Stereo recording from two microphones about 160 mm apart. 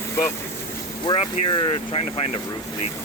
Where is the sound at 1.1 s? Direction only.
30° left (ahead or behind).